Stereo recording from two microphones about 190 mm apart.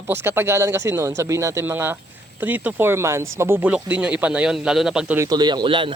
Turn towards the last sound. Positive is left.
turn(degrees=-25)  # may be behind; listen again after turning